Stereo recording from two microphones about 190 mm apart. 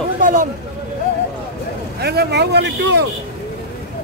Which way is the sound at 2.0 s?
60° right (ahead or behind).